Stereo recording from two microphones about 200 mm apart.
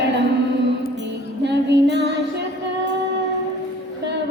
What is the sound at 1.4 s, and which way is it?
Female singing, 60° right (ahead or behind).